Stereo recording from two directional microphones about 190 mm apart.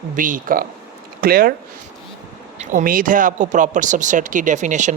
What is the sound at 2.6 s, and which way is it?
Speech, 40° right (ahead or behind).